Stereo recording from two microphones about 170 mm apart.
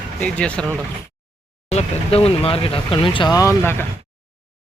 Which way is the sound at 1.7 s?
35° left (ahead or behind).